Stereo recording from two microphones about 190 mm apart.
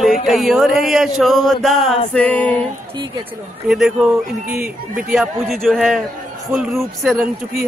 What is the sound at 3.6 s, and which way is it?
Speech, 5° right (ahead or behind).